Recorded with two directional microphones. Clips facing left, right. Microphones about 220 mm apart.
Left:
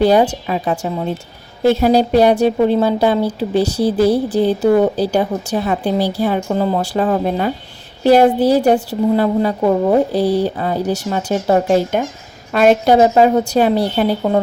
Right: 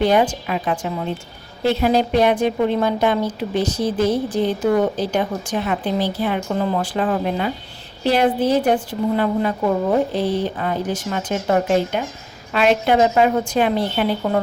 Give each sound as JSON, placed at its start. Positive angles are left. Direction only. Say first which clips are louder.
{"t": 0.0, "sound": "a woman's voice", "louder": "left 4 dB", "side_deg": 35}